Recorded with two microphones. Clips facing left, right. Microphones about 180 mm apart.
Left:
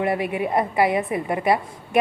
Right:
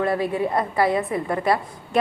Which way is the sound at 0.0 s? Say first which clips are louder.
Right 1 dB; 15° left (ahead or behind).